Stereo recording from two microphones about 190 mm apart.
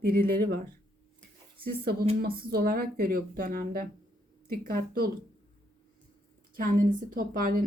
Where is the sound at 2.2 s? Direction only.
55° right (ahead or behind).